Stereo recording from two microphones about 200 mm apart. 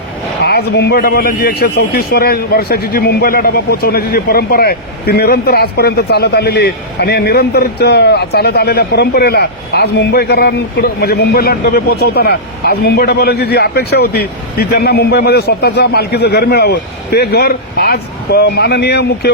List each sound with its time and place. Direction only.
0.4 s a man's voice: 55° left (ahead or behind)